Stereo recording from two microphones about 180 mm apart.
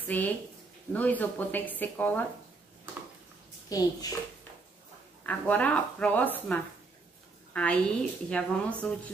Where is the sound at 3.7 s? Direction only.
20° left (ahead or behind).